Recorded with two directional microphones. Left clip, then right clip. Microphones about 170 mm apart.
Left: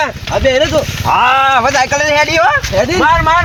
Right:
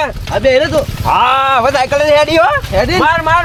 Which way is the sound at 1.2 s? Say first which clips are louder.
Left 1 dB; 50° right (ahead or behind).